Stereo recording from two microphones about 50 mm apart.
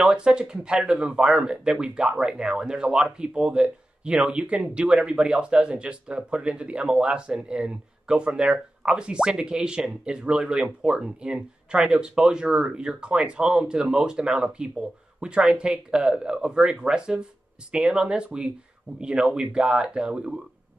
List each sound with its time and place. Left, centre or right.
0.1 s speech: centre